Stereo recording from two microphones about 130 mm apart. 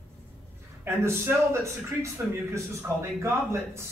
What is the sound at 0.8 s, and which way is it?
A man's voice, 20° right (ahead or behind).